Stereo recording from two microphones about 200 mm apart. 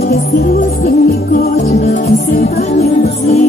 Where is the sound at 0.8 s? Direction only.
50° left (ahead or behind).